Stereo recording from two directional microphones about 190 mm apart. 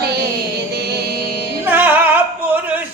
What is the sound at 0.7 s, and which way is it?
Music, 60° right (ahead or behind).